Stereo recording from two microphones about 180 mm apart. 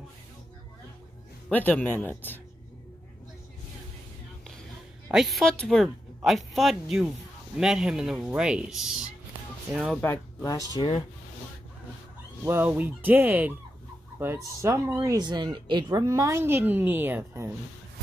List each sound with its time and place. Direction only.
1.5 s speech: 10° left (ahead or behind)
5.1 s speech: centre (ahead or behind)
10.0 s speech: 20° left (ahead or behind)
12.4 s speech: 10° right (ahead or behind)